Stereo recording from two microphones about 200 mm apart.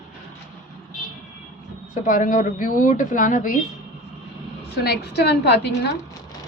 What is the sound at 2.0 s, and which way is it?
Speech, 40° left (ahead or behind).